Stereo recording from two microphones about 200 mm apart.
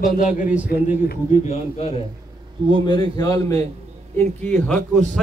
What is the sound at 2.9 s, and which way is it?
Speech, 20° left (ahead or behind).